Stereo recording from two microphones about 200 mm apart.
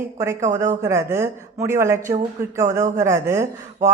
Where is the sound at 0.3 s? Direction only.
35° right (ahead or behind).